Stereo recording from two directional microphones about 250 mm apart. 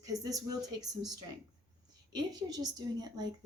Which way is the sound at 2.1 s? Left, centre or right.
Centre.